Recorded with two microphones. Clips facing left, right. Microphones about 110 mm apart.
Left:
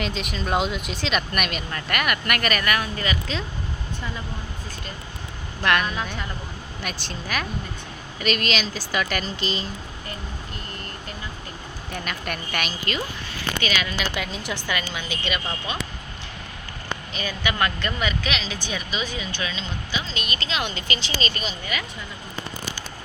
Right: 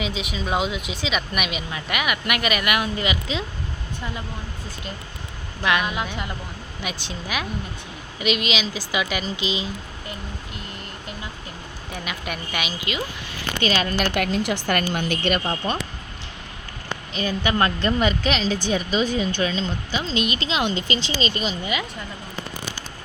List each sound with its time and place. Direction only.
0.0 s a woman's voice: 5° right (ahead or behind)
5.6 s speech: 10° right (ahead or behind)
11.9 s a woman's voice: 5° right (ahead or behind)
13.6 s speech: 35° right (ahead or behind)
13.8 s a woman's voice: 55° right (ahead or behind)
14.9 s speech: 50° right (ahead or behind)
17.2 s speech: 30° right (ahead or behind)